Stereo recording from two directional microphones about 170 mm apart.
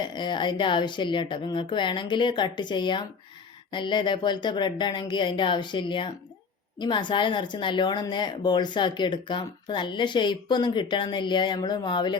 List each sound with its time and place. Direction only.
0.0 s speech: 25° left (ahead or behind)